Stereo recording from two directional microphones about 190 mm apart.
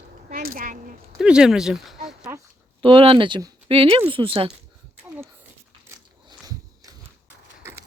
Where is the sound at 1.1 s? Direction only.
5° right (ahead or behind).